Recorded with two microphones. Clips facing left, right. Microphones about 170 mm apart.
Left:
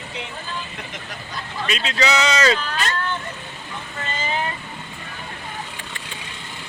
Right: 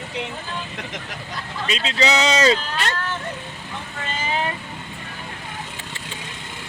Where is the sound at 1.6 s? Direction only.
25° right (ahead or behind).